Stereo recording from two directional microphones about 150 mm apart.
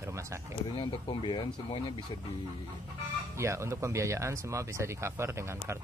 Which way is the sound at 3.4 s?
20° right (ahead or behind).